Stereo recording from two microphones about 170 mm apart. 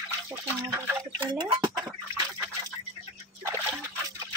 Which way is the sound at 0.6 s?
25° right (ahead or behind).